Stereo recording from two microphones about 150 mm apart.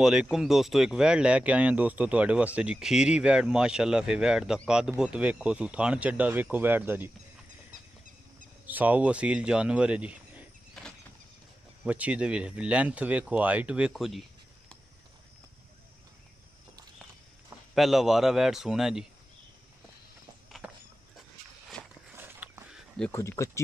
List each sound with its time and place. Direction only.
0.0 s speech: 5° right (ahead or behind)
8.6 s speech: 10° right (ahead or behind)
10.8 s bird flight: 5° left (ahead or behind)
11.8 s speech: 10° right (ahead or behind)
17.7 s speech: centre (ahead or behind)
22.1 s a sound: 15° right (ahead or behind)
22.7 s a sound: 5° right (ahead or behind)
23.1 s speech: 20° left (ahead or behind)